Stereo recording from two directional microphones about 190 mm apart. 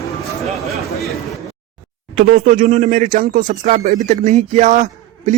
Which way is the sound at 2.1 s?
45° right (ahead or behind).